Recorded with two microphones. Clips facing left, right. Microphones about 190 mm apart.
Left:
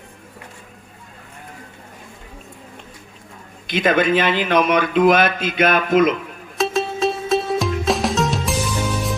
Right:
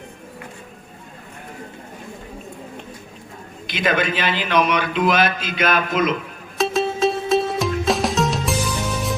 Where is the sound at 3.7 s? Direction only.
50° left (ahead or behind).